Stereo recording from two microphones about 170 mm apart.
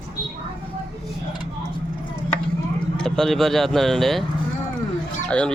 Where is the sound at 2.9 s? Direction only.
5° left (ahead or behind).